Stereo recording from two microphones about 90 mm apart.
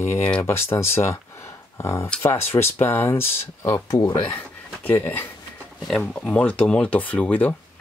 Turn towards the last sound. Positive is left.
turn(degrees=15)  # may be behind; listen again after turning